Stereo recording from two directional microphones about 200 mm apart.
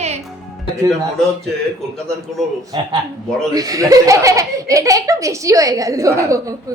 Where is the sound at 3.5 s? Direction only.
15° right (ahead or behind).